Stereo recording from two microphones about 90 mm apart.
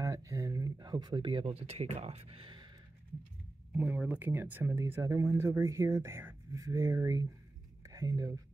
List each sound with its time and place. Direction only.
0.0 s a sound: 40° right (ahead or behind); by 1.8 s 90° right
2.2 s speech: 80° right; by 2.7 s 65° right (ahead or behind)
3.7 s speech: 15° right (ahead or behind)
4.7 s speech: 30° right (ahead or behind)